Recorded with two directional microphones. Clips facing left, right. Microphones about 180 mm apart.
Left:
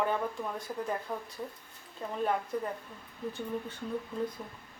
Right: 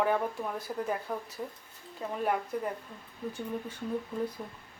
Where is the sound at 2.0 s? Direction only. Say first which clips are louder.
Right 2 dB; 10° right (ahead or behind).